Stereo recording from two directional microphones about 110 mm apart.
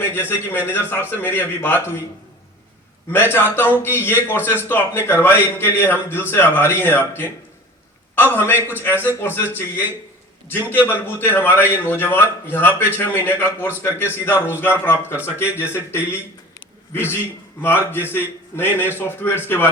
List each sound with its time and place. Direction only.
0.1 s a man's voice: 20° left (ahead or behind)
3.1 s a man's voice: 20° left (ahead or behind)